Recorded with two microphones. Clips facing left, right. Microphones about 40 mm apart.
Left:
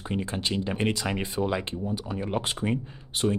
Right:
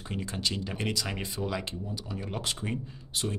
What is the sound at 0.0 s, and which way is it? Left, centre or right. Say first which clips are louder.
Speech: left 4 dB; left.